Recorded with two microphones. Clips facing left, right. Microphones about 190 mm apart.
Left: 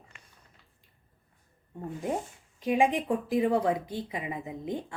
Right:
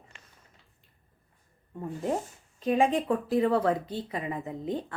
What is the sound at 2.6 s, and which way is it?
Speech, 10° left (ahead or behind).